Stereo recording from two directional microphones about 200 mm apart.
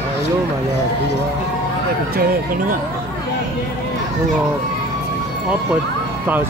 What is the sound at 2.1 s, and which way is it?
Speech, 45° right (ahead or behind).